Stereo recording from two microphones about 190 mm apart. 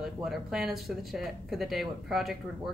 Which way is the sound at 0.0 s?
Centre (ahead or behind).